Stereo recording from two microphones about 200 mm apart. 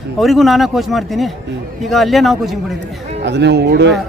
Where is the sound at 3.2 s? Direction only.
60° right (ahead or behind).